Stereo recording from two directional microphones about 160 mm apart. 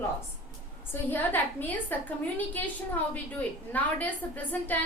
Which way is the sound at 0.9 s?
10° left (ahead or behind).